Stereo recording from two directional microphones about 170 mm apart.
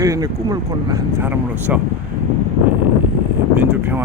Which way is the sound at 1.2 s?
10° right (ahead or behind).